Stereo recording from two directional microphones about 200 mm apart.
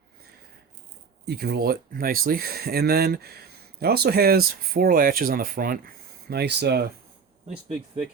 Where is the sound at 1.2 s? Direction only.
55° right (ahead or behind).